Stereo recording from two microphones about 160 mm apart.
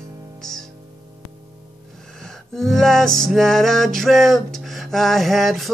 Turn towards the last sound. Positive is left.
turn(degrees=0)  # may be behind; listen again after turning